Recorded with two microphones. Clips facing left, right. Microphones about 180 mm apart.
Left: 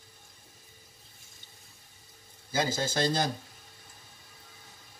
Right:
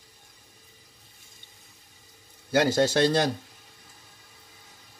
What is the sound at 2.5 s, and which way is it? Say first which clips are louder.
Speech: right 8 dB; 65° right (ahead or behind).